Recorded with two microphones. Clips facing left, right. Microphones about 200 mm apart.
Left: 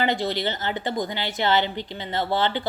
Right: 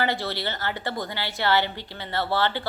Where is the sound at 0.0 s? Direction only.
20° left (ahead or behind).